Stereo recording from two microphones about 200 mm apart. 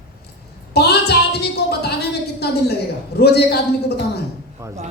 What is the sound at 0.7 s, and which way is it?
A woman's voice, 55° left (ahead or behind).